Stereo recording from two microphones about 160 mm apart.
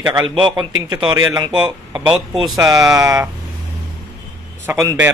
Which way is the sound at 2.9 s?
20° right (ahead or behind).